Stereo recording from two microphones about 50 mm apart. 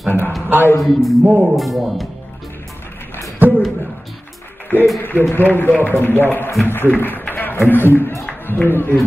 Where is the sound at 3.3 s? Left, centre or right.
Right.